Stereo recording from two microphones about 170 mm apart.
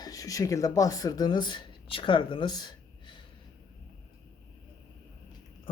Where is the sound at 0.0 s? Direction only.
20° left (ahead or behind).